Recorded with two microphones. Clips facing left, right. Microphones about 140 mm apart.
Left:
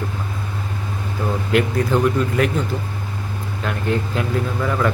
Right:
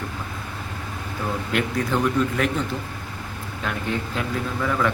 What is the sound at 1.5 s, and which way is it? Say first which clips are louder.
Speech: left 6 dB; centre (ahead or behind).